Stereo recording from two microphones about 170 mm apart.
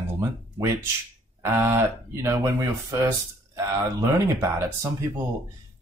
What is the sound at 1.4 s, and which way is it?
Speech, 15° right (ahead or behind).